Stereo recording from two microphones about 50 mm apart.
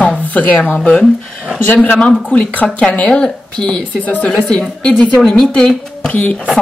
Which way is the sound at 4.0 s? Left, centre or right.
Left.